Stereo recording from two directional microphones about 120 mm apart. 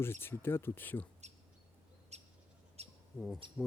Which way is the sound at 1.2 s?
70° right (ahead or behind).